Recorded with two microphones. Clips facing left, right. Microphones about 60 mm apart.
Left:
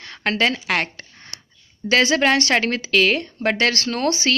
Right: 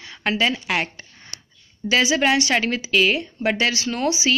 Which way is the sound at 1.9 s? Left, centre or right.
Left.